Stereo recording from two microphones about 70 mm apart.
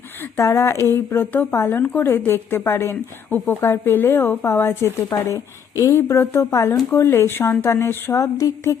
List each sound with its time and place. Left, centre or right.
0.3 s a woman's voice: left
1.8 s speech: left
2.0 s a woman's voice: left
6.0 s a woman's voice: left
8.2 s a woman's voice: left